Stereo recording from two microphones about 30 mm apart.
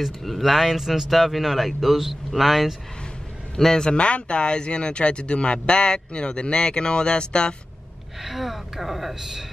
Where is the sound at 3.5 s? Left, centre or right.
Centre.